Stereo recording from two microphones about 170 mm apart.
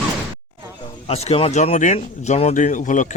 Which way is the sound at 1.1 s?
35° left (ahead or behind).